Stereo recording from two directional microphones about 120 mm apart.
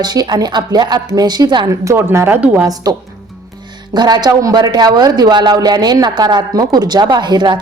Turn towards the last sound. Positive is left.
turn(degrees=-40)  # may be behind; listen again after turning